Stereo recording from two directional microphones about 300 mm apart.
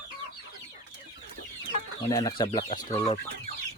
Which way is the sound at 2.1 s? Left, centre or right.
Centre.